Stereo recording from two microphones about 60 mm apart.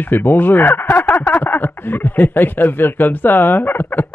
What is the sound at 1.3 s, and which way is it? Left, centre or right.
Speech, left.